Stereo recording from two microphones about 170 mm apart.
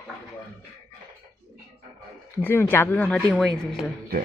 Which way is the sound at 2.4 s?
10° left (ahead or behind).